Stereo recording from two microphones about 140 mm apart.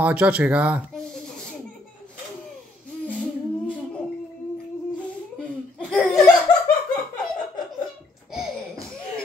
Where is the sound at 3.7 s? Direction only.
10° left (ahead or behind).